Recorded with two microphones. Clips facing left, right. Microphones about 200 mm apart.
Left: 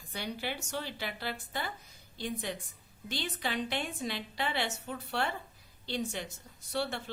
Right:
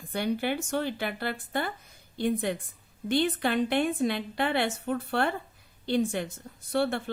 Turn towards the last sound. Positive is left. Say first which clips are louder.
# right 8 dB
turn(degrees=-55)  # may be behind; listen again after turning